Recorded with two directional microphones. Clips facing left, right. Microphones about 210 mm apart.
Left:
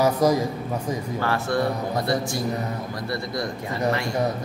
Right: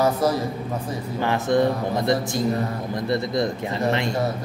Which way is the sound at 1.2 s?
20° right (ahead or behind).